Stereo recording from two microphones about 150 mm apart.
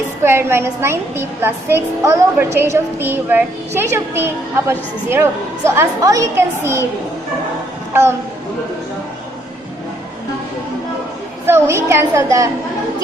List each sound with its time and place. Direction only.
0.3 s a woman's voice: 15° right (ahead or behind)
11.4 s a woman's voice: 15° right (ahead or behind)